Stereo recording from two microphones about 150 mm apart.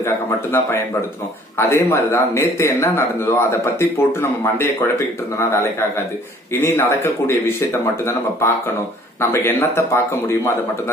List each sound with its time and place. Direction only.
0.0 s speech: 15° left (ahead or behind)